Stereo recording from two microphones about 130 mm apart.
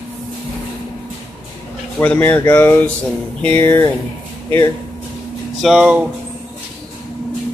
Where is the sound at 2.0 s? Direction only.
15° left (ahead or behind).